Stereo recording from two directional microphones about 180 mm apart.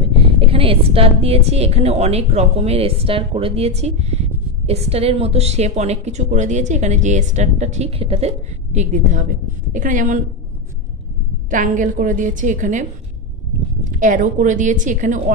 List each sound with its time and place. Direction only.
0.0 s a woman's voice: 30° right (ahead or behind)
11.5 s a woman's voice: 45° right (ahead or behind)
13.9 s a woman's voice: 45° right (ahead or behind)